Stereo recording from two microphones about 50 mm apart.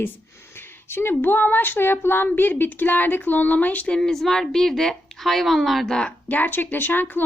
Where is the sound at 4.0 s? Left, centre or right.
Centre.